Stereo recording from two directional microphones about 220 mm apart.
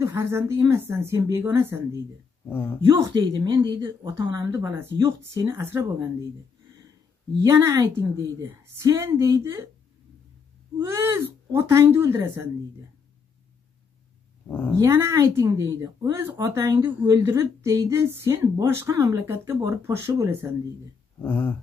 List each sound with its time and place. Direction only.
0.0 s speech: 10° right (ahead or behind)
2.5 s speech: 10° left (ahead or behind)
3.1 s speech: 20° right (ahead or behind)
7.4 s speech: 15° right (ahead or behind)
10.9 s speech: 10° right (ahead or behind)
14.5 s speech: 10° left (ahead or behind)
14.8 s speech: 10° right (ahead or behind)
21.2 s speech: 10° left (ahead or behind)